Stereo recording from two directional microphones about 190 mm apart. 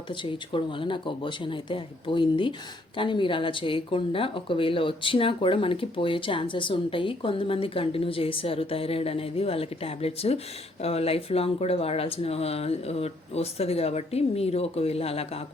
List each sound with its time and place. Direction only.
0.1 s speech: 25° left (ahead or behind)